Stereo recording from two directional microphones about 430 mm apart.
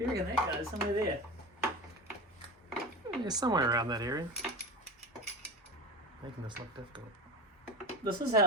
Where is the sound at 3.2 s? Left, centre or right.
Centre.